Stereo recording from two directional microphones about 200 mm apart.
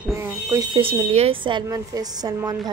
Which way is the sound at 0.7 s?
25° right (ahead or behind).